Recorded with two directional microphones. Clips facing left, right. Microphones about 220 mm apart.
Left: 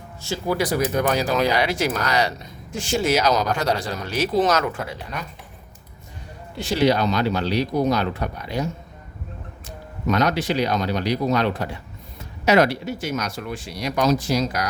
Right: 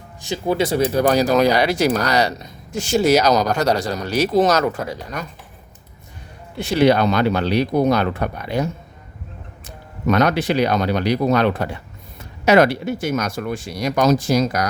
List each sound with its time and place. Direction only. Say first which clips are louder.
0.2 s speech: right 3 dB; 20° right (ahead or behind); by 5.3 s 45° right (ahead or behind)
6.6 s speech: right 4 dB; 60° right (ahead or behind)